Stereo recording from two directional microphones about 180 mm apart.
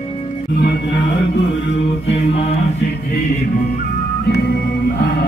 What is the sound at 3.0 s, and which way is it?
Music, 55° left (ahead or behind).